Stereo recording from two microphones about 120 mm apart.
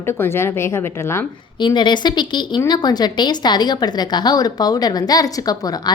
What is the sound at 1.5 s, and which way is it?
A woman's voice, 40° left (ahead or behind).